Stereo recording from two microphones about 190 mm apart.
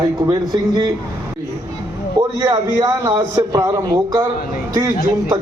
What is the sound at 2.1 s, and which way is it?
A man's voice, 20° right (ahead or behind).